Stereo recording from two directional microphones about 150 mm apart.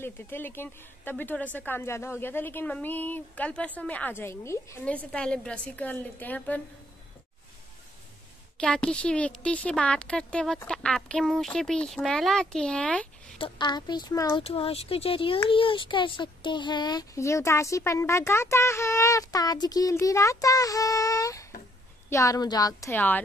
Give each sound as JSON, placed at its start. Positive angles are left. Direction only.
{"t": 0.0, "sound": "a woman's voice", "side_deg": 15}
{"t": 4.8, "sound": "a woman's voice", "side_deg": 5}
{"t": 8.5, "sound": "a woman's voice", "side_deg": 5}
{"t": 13.4, "sound": "speech", "side_deg": 30}
{"t": 14.4, "sound": "speech", "side_deg": 40}